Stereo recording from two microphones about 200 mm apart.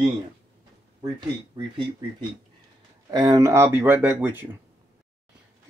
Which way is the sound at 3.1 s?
20° right (ahead or behind).